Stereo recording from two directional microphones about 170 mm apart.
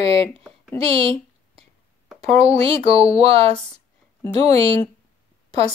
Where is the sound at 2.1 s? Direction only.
40° right (ahead or behind).